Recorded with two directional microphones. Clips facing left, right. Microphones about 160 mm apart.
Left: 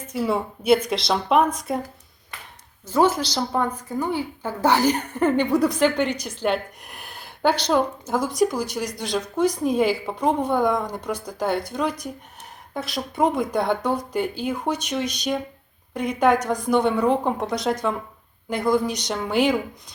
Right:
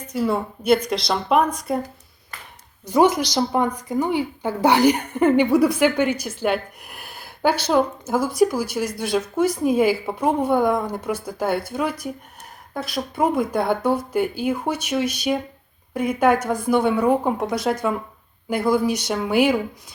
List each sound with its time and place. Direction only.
0.1 s speech: centre (ahead or behind)
2.8 s a woman's voice: 15° right (ahead or behind)